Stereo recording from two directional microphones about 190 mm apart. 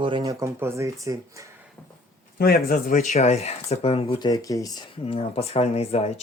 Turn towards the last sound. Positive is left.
turn(degrees=35)  # may be behind; listen again after turning